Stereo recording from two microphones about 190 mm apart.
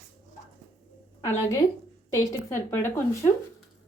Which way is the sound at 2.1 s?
15° left (ahead or behind).